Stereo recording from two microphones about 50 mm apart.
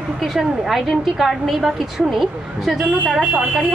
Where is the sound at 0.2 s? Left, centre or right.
Centre.